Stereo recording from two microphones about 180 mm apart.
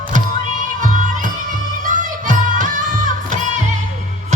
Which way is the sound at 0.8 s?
45° right (ahead or behind).